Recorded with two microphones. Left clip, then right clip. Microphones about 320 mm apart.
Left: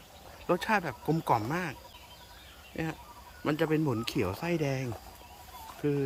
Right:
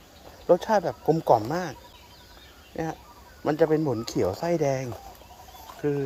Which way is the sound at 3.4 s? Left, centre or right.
Centre.